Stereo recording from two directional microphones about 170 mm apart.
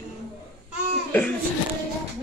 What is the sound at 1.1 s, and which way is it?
Laughter, 10° left (ahead or behind).